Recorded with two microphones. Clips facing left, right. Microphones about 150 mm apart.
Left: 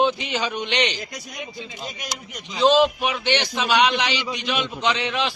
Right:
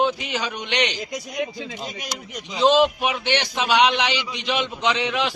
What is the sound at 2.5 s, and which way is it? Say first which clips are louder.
A man's voice: even; 15° right (ahead or behind).